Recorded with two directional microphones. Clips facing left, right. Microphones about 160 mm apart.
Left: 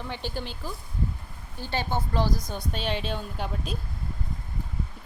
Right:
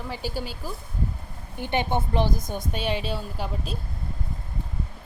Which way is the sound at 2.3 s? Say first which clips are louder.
Right 2 dB; 50° right (ahead or behind).